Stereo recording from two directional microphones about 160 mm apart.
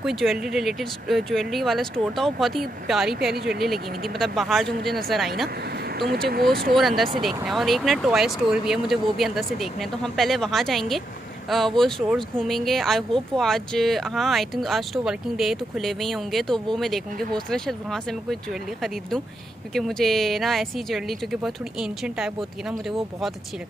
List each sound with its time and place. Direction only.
0.0 s speech: centre (ahead or behind)
5.9 s speech: 85° right
6.7 s speech: centre (ahead or behind)